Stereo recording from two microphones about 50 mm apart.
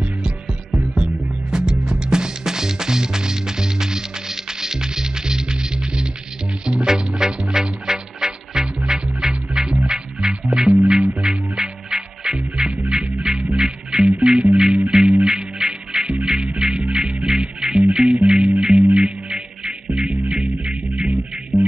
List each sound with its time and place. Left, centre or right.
0.9 s music: centre
20.9 s music: right